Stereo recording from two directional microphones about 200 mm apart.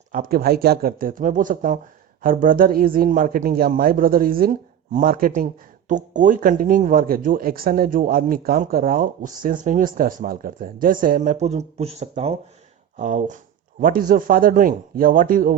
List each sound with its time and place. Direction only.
0.1 s speech: 45° right (ahead or behind)